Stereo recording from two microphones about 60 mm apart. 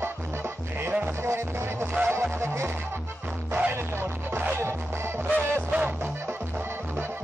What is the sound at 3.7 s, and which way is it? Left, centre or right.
Music, right.